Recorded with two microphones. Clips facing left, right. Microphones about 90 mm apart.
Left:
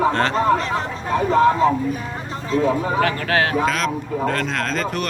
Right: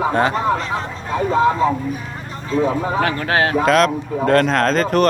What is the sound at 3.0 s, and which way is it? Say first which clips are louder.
Speech: right 1 dB; 25° right (ahead or behind).